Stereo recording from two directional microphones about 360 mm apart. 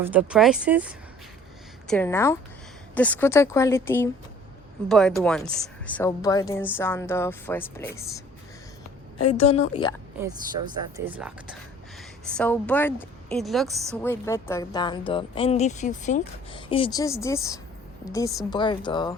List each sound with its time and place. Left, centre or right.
0.0 s a woman's voice: centre
9.4 s speech: centre
10.9 s a woman's voice: centre